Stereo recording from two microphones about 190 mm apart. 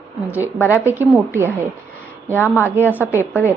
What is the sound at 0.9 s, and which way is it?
Speech, 10° right (ahead or behind).